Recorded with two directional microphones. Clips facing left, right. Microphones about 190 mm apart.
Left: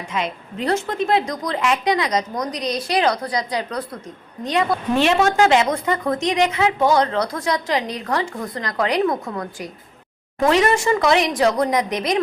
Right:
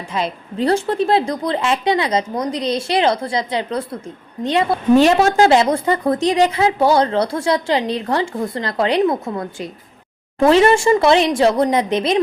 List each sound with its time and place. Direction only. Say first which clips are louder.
0.1 s a woman's voice: right 3 dB; 35° right (ahead or behind)